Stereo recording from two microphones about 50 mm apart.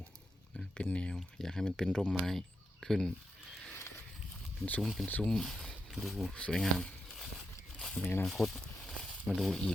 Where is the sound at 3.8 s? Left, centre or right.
Left.